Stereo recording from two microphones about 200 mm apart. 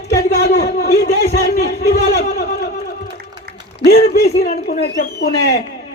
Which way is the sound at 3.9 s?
50° left (ahead or behind).